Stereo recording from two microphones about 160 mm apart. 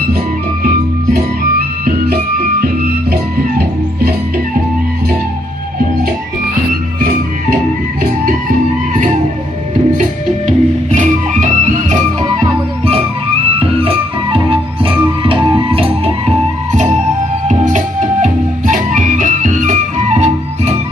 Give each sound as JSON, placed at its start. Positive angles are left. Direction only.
{"t": 9.9, "sound": "music", "side_deg": -50}
{"t": 12.2, "sound": "music", "side_deg": -35}
{"t": 15.4, "sound": "music", "side_deg": -30}
{"t": 17.5, "sound": "music", "side_deg": -50}